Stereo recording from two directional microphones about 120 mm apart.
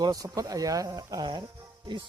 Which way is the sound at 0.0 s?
30° right (ahead or behind).